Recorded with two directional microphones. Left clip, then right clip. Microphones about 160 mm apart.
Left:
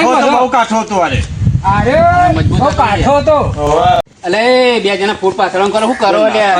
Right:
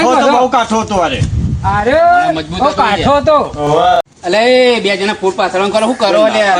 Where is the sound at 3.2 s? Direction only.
Centre (ahead or behind).